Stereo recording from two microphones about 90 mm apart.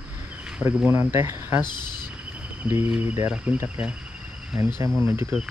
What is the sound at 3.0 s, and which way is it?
Speech, 25° right (ahead or behind).